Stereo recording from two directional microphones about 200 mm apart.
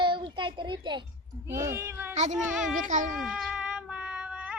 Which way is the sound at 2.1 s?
35° right (ahead or behind).